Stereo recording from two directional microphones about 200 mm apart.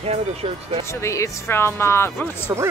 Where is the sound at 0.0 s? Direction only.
30° right (ahead or behind).